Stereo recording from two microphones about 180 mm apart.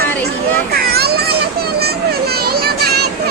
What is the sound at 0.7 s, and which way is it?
Children playing, 60° right (ahead or behind).